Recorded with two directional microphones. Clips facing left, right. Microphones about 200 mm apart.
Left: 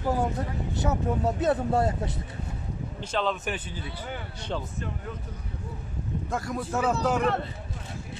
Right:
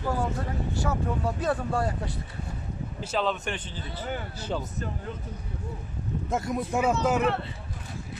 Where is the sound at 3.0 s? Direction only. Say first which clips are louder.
Even; 5° right (ahead or behind).